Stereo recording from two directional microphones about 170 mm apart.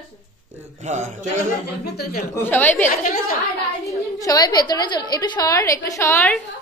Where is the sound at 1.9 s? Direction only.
65° left (ahead or behind).